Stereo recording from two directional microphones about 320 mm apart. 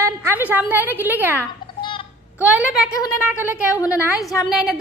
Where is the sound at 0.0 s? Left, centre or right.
Centre.